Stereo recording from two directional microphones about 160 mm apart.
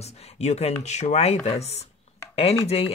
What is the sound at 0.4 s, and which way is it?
Speech, 40° left (ahead or behind).